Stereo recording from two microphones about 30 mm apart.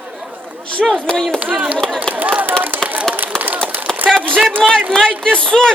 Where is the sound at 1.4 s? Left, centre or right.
Right.